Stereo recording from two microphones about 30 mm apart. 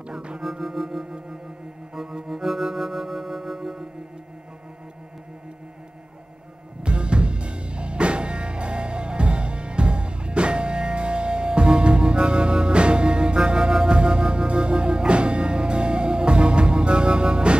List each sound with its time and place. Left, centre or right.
0.4 s music: centre
2.2 s music: centre
6.8 s music: right